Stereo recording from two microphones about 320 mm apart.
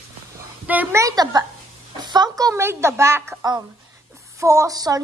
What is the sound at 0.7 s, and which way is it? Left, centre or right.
A woman's voice, centre.